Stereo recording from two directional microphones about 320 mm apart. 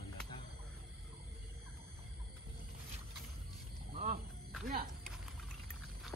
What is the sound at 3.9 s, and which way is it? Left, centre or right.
Wild animals, right.